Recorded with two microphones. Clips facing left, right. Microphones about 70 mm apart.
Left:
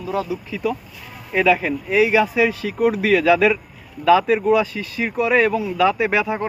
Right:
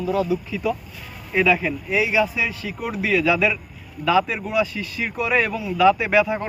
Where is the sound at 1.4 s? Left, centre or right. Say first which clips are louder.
Left 2 dB; left.